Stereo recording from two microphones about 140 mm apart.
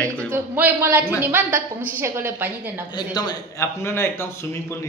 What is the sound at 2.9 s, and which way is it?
A man's voice, 30° left (ahead or behind).